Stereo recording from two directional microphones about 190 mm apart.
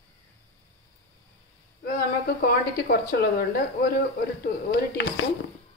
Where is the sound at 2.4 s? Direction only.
55° left (ahead or behind).